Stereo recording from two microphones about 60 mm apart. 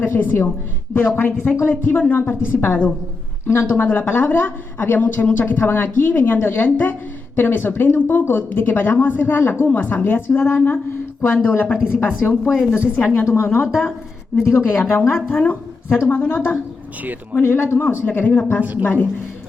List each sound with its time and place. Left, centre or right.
0.0 s a woman's voice: left
12.5 s a woman's voice: centre
13.2 s speech: left
13.5 s a woman's voice: left